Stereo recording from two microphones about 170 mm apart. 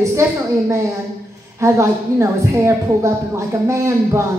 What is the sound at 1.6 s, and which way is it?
Speech, 15° right (ahead or behind).